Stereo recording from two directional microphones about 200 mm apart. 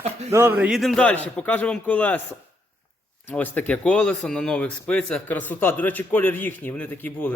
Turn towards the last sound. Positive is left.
turn(degrees=10)  # may be behind; listen again after turning